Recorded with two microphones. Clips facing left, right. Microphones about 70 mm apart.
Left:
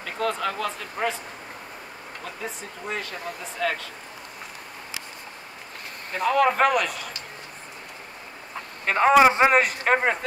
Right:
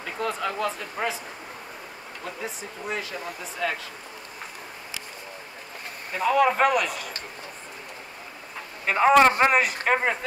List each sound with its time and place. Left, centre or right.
0.0 s speech: centre
2.2 s speech: centre
6.1 s speech: centre
8.8 s speech: centre